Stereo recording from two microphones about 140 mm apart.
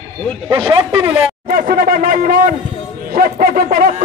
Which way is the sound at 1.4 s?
80° right.